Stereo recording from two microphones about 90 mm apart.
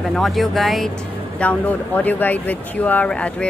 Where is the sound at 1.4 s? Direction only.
15° left (ahead or behind).